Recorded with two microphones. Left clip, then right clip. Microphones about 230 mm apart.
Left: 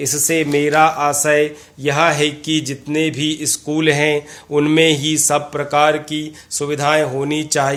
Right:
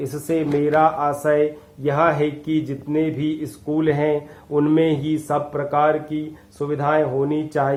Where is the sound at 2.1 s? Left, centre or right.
Left.